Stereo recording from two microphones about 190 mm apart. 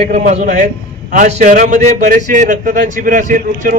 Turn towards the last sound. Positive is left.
turn(degrees=-45)  # may be behind; listen again after turning